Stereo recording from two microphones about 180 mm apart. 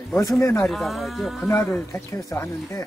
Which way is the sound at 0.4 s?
15° left (ahead or behind).